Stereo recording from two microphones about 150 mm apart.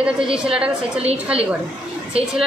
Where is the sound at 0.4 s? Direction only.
5° right (ahead or behind).